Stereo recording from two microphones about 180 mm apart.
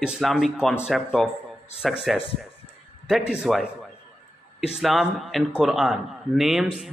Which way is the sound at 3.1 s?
5° right (ahead or behind).